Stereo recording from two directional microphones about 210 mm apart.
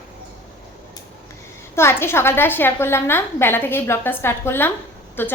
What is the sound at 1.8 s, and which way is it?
A woman's voice, 10° left (ahead or behind).